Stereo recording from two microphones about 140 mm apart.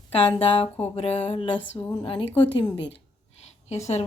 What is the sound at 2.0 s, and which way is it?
Speech, 40° left (ahead or behind).